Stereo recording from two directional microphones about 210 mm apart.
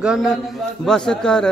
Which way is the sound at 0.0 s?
5° right (ahead or behind).